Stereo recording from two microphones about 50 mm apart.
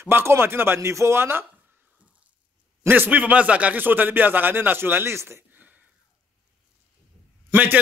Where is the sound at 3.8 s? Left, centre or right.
Right.